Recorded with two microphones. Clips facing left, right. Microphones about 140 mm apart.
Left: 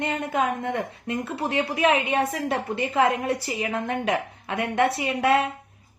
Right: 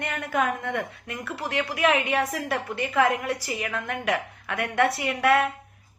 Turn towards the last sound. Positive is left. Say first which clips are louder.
# even
turn(degrees=25)  # may be behind; listen again after turning